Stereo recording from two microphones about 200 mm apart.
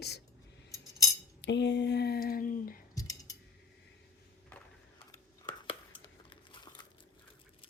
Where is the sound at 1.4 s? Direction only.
60° left (ahead or behind); by 2.8 s 45° left (ahead or behind).